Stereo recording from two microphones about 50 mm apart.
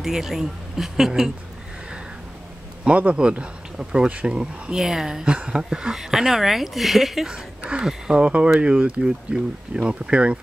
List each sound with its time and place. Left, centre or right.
0.0 s a woman's voice: centre
2.8 s speech: right
4.7 s a woman's voice: centre
5.2 s a woman's voice: right; by 7.2 s centre
7.2 s speech: centre